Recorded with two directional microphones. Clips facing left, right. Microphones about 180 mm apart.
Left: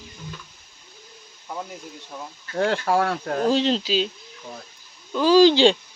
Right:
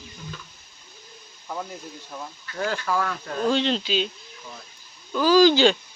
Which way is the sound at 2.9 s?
65° left (ahead or behind).